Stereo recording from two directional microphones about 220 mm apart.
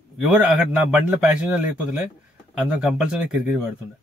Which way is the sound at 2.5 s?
5° right (ahead or behind).